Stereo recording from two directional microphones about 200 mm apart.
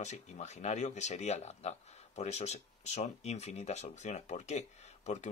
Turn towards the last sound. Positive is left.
turn(degrees=35)  # may be behind; listen again after turning